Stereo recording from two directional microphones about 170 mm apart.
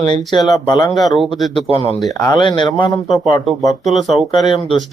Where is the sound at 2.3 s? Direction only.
30° left (ahead or behind).